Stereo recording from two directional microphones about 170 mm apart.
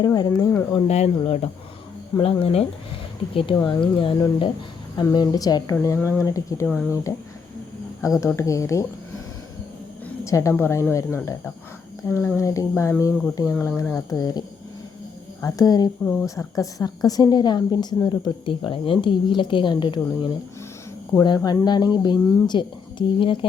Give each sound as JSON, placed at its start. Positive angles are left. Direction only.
{"t": 0.0, "sound": "a woman's voice", "side_deg": 20}
{"t": 0.9, "sound": "a woman's voice", "side_deg": 40}
{"t": 8.2, "sound": "speech", "side_deg": 15}
{"t": 10.2, "sound": "a woman's voice", "side_deg": 15}
{"t": 14.1, "sound": "a woman's voice", "side_deg": 20}